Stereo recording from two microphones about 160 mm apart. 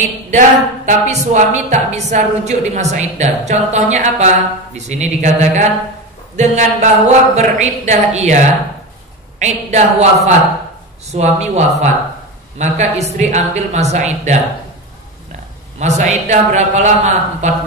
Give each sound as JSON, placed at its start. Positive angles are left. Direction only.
{"t": 0.3, "sound": "a woman's voice", "side_deg": -50}
{"t": 9.4, "sound": "a woman's voice", "side_deg": -45}
{"t": 15.8, "sound": "a woman's voice", "side_deg": -45}